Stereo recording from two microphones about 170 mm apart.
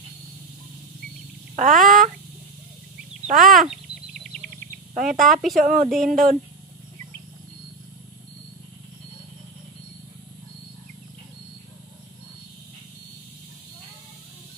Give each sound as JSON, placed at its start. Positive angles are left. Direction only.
{"t": 1.6, "sound": "speech", "side_deg": -50}
{"t": 3.3, "sound": "speech", "side_deg": -50}
{"t": 4.9, "sound": "speech", "side_deg": -50}
{"t": 5.3, "sound": "speech", "side_deg": 0}
{"t": 5.6, "sound": "speech", "side_deg": -55}
{"t": 5.9, "sound": "speech", "side_deg": 0}